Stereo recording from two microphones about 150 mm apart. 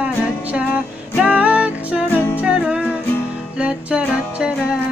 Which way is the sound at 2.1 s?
15° left (ahead or behind).